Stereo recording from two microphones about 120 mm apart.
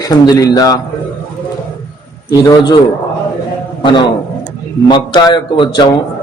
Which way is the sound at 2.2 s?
35° left (ahead or behind).